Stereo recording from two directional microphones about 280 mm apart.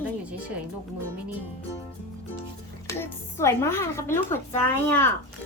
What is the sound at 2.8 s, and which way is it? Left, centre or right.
Speech, centre.